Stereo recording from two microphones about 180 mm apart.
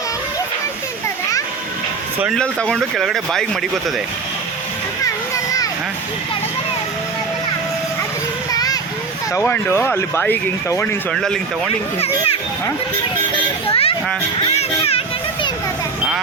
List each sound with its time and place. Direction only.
2.2 s speech: 5° left (ahead or behind)
5.0 s children playing: 20° left (ahead or behind)
8.5 s children playing: 20° left (ahead or behind)
9.3 s speech: 15° left (ahead or behind)
11.9 s a child's voice: 35° left (ahead or behind)
13.7 s a child's voice: 30° left (ahead or behind)
14.5 s children playing: 35° left (ahead or behind)